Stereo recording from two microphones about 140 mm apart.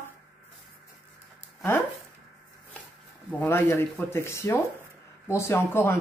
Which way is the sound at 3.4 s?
15° left (ahead or behind).